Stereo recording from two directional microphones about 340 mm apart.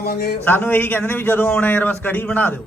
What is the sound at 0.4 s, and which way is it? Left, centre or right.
A man's voice, centre.